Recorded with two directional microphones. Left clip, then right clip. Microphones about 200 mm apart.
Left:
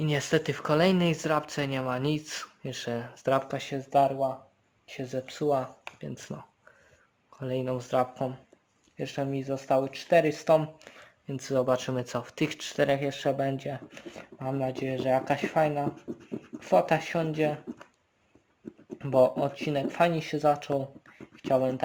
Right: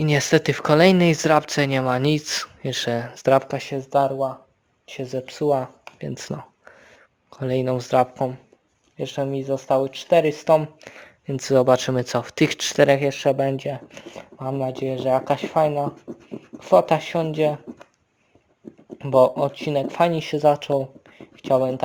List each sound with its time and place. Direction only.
0.0 s speech: 45° right (ahead or behind)
6.0 s a sound: 45° right (ahead or behind)
7.3 s speech: 40° right (ahead or behind)
10.8 s speech: 45° right (ahead or behind)
18.9 s speech: 30° right (ahead or behind)